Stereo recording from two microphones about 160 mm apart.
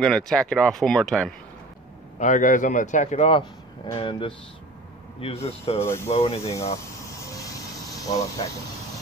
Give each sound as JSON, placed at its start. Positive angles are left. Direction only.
{"t": 0.0, "sound": "speech", "side_deg": 5}
{"t": 2.1, "sound": "a man's voice", "side_deg": 55}
{"t": 5.8, "sound": "speech", "side_deg": 15}
{"t": 6.1, "sound": "speech", "side_deg": 40}
{"t": 6.5, "sound": "a sound", "side_deg": 20}